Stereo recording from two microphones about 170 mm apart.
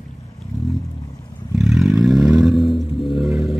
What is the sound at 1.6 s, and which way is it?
Vehicle, centre (ahead or behind).